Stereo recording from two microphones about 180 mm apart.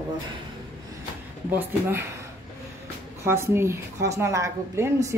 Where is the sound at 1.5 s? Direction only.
15° right (ahead or behind).